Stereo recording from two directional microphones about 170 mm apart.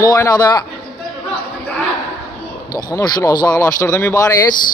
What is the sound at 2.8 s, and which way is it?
Speech, 20° left (ahead or behind).